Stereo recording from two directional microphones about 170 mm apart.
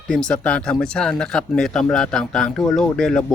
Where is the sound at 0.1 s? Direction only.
5° left (ahead or behind).